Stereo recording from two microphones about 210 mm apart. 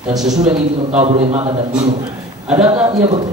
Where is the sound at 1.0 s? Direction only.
30° right (ahead or behind).